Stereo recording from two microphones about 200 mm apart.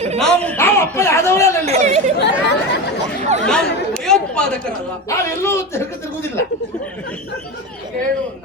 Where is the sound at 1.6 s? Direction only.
35° right (ahead or behind).